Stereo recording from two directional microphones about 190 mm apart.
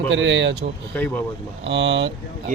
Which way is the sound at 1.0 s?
10° left (ahead or behind).